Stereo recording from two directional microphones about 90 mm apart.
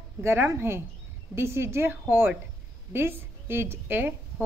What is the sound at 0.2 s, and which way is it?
A woman's voice, 25° right (ahead or behind).